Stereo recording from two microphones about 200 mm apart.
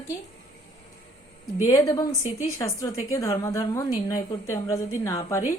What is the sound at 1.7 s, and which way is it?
A woman's voice, 20° left (ahead or behind).